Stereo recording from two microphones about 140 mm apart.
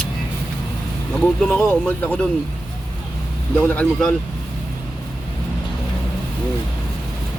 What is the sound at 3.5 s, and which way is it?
Speech, 10° left (ahead or behind).